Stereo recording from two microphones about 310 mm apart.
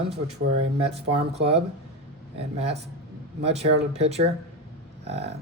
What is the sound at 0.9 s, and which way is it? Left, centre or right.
Speech, centre.